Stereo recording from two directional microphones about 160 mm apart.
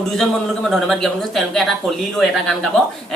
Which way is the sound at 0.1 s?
Centre (ahead or behind).